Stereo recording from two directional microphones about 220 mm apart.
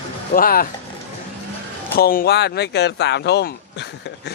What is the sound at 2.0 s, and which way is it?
Speech, 40° left (ahead or behind).